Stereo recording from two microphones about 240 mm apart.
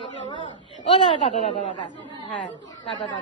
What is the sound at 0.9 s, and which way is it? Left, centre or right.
Speech, left.